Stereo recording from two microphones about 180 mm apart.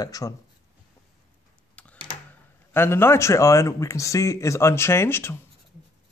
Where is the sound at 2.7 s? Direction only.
15° left (ahead or behind).